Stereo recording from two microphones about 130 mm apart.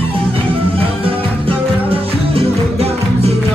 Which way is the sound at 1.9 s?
50° right (ahead or behind).